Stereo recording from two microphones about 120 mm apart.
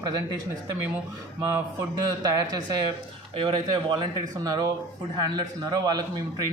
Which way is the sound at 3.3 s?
40° right (ahead or behind).